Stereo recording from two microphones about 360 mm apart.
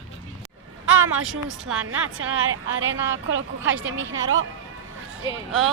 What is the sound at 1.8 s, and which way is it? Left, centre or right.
Speech, right.